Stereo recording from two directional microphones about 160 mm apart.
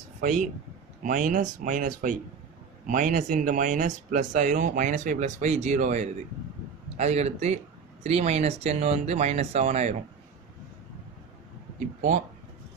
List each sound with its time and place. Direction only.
0.2 s speech: 55° right (ahead or behind)